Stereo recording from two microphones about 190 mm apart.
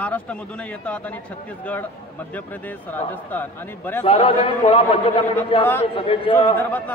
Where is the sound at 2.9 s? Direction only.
10° left (ahead or behind).